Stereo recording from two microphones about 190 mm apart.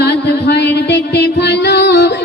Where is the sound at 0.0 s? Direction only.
60° left (ahead or behind).